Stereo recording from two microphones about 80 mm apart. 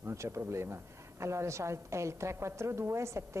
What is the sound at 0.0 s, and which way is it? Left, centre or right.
A woman's voice, right.